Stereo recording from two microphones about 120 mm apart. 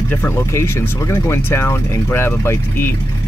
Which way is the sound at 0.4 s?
25° left (ahead or behind).